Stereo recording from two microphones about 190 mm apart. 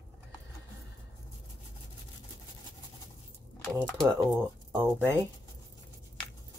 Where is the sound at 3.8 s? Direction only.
Centre (ahead or behind).